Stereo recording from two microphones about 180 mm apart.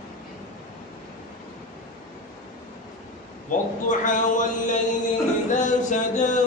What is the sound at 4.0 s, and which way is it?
Music, 45° left (ahead or behind).